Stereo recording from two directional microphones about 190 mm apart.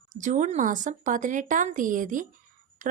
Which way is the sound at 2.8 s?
40° right (ahead or behind).